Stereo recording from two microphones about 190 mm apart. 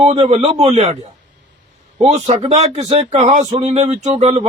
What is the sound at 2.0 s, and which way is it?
Speech, 35° right (ahead or behind).